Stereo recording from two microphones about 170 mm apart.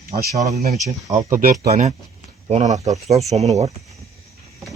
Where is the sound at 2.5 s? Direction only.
45° right (ahead or behind).